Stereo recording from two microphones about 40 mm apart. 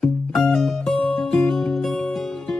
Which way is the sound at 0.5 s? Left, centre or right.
Centre.